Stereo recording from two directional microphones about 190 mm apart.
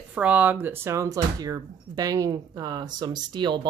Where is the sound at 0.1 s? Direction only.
10° right (ahead or behind).